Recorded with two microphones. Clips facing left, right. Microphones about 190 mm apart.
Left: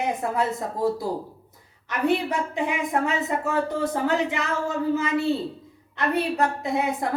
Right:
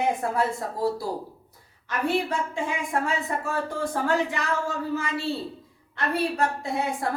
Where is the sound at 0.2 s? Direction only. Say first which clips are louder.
Left 1 dB; 20° left (ahead or behind).